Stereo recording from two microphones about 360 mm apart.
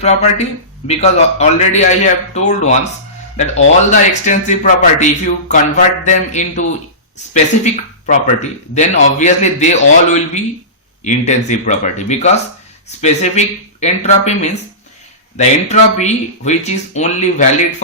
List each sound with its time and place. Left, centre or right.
0.0 s speech: centre